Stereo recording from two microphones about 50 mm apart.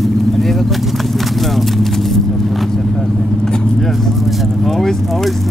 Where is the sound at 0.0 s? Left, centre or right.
Centre.